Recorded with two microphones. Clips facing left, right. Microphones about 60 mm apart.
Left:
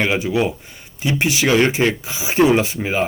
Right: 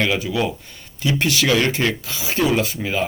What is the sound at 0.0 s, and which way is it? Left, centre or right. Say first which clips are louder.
A man's voice: left 2 dB; left.